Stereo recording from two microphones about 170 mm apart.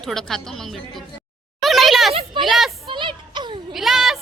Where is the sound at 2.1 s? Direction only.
35° right (ahead or behind).